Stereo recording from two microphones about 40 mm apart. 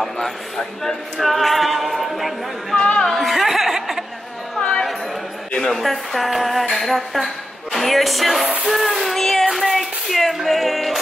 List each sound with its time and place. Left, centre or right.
0.0 s speech: centre
1.2 s a capella: centre
2.7 s music: left
3.1 s a sound: centre
4.6 s a sound: left
5.7 s speech: centre
6.7 s a sound: centre
7.7 s a woman's voice: centre
8.6 s child singing: centre
10.4 s music: centre